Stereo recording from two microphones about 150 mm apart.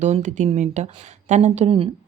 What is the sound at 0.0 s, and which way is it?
Speech, 50° right (ahead or behind).